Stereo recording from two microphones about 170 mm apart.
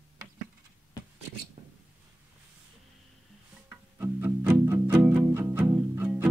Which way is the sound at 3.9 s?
15° right (ahead or behind).